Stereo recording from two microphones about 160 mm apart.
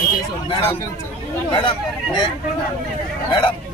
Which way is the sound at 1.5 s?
30° left (ahead or behind).